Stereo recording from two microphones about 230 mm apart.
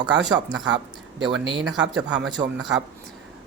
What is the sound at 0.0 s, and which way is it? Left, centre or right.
Speech, centre.